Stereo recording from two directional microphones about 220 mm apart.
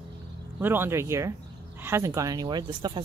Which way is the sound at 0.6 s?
10° right (ahead or behind).